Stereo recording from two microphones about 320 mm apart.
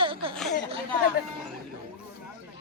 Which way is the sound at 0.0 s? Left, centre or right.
Centre.